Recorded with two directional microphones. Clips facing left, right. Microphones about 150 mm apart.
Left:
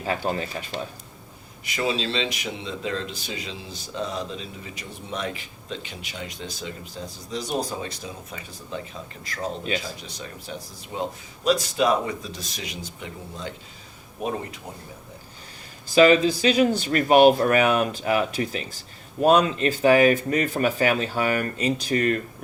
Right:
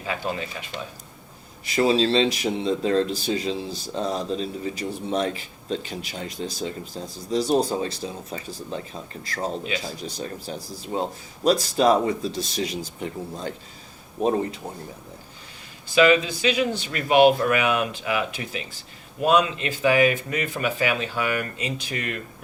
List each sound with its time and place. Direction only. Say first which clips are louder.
0.0 s speech: left 2 dB; 40° left (ahead or behind)
1.6 s speech: right 6 dB; 35° right (ahead or behind)
16.0 s speech: left 2 dB; 35° left (ahead or behind)